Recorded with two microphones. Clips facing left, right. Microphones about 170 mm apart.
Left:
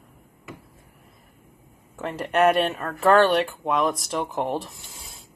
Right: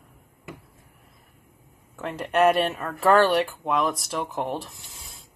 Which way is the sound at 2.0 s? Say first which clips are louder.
Even; centre (ahead or behind).